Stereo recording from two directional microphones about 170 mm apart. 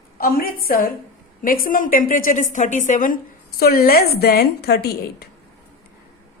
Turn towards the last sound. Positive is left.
turn(degrees=65)  # may be behind; listen again after turning